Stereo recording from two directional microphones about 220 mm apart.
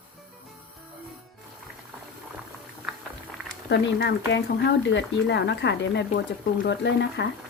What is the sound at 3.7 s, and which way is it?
Speech, 50° left (ahead or behind).